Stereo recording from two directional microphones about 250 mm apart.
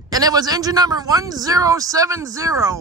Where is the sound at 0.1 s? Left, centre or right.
Centre.